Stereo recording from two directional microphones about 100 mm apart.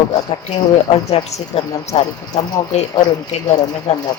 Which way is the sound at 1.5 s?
70° left (ahead or behind).